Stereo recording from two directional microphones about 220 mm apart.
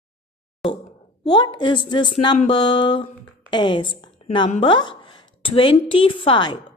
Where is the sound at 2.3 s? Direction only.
30° left (ahead or behind).